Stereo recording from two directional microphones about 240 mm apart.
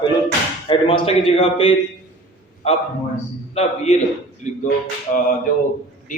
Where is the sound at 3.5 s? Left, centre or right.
Left.